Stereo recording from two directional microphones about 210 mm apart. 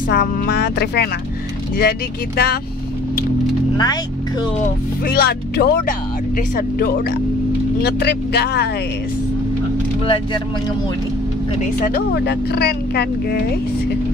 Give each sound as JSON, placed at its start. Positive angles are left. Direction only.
{"t": 0.1, "sound": "speech", "side_deg": 50}
{"t": 3.7, "sound": "speech", "side_deg": 20}
{"t": 5.0, "sound": "speech", "side_deg": 50}
{"t": 10.0, "sound": "speech", "side_deg": 25}
{"t": 11.8, "sound": "speech", "side_deg": 50}